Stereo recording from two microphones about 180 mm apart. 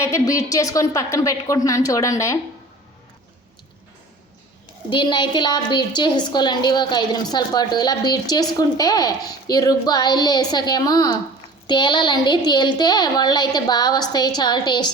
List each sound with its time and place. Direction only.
0.0 s a woman's voice: 15° left (ahead or behind)
4.9 s a woman's voice: 25° left (ahead or behind)